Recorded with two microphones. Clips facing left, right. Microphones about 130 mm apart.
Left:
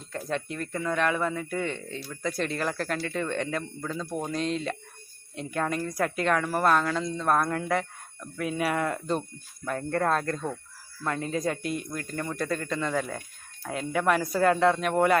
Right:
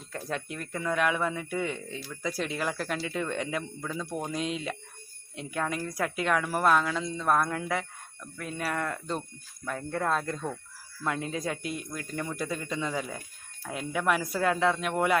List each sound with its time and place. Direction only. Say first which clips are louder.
0.1 s a woman's voice: left 3 dB; 5° right (ahead or behind)
12.9 s speech: left 4 dB; 55° left (ahead or behind)
13.7 s a woman's voice: left 3 dB; centre (ahead or behind)